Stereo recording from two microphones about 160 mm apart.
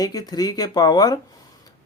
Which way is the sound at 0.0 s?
25° left (ahead or behind).